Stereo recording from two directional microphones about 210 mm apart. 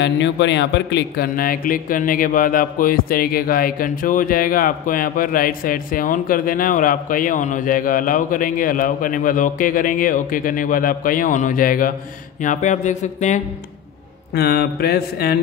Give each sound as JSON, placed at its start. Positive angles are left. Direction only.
{"t": 0.0, "sound": "speech", "side_deg": 60}
{"t": 14.3, "sound": "mantra", "side_deg": 50}